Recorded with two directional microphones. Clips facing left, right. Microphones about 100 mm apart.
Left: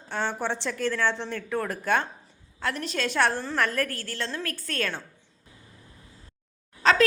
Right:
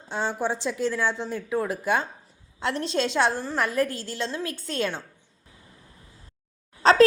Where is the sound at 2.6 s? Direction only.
25° right (ahead or behind).